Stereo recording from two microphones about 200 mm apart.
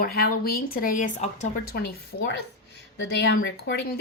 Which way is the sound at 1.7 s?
50° left (ahead or behind).